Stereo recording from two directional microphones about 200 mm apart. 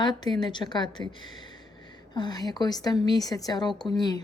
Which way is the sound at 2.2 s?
20° left (ahead or behind).